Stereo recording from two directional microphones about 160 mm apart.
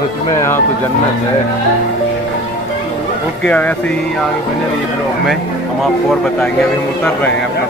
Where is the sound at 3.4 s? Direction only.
10° left (ahead or behind).